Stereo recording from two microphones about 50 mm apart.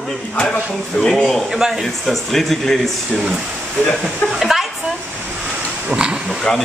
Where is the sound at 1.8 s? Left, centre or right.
Centre.